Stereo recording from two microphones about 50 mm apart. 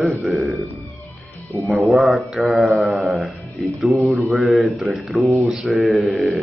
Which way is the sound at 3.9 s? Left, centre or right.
Right.